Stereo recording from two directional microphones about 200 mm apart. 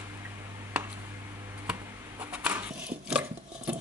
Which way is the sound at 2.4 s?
5° right (ahead or behind).